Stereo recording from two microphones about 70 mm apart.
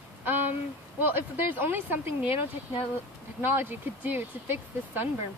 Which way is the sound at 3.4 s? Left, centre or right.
Right.